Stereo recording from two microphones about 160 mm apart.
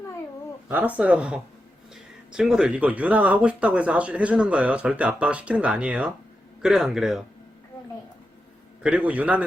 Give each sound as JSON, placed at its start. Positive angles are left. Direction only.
{"t": 0.7, "sound": "a man's voice", "side_deg": -10}
{"t": 8.8, "sound": "speech", "side_deg": -10}